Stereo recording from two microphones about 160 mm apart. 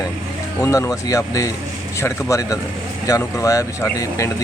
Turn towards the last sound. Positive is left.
turn(degrees=20)  # may be behind; listen again after turning